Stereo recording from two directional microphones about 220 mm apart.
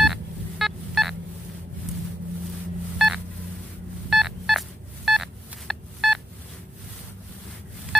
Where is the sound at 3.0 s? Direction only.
Centre (ahead or behind).